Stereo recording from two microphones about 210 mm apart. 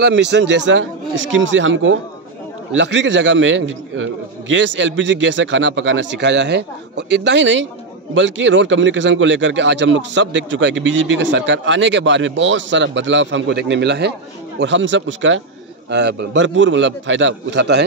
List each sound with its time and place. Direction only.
0.0 s a man's voice: 55° right (ahead or behind)